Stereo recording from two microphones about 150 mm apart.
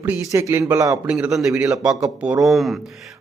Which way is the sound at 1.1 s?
10° right (ahead or behind).